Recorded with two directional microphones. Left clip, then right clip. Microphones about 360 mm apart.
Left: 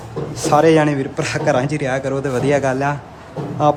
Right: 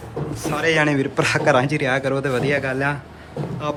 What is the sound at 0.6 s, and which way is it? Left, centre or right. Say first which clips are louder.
A man's voice: left 3 dB; centre.